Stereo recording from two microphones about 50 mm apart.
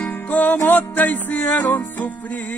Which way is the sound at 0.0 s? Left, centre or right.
Left.